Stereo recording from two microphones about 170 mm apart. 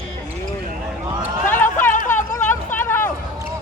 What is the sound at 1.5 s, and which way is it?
Chatter, 10° left (ahead or behind).